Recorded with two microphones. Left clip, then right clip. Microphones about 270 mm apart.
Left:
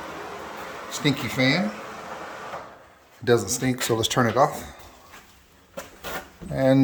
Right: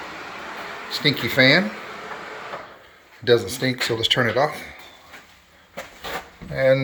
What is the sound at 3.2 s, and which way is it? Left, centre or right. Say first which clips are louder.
Speech: right 3 dB; left.